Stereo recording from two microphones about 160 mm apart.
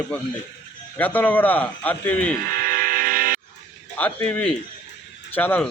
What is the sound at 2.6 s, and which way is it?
Train, 60° right (ahead or behind).